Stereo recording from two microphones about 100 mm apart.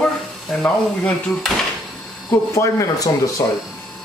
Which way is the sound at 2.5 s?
30° left (ahead or behind).